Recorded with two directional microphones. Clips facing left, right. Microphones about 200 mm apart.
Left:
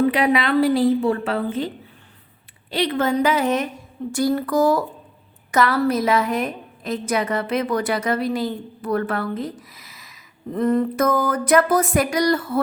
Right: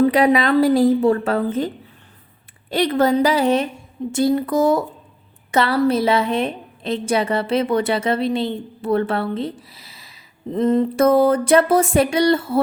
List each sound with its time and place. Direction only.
0.0 s a woman's voice: 40° right (ahead or behind)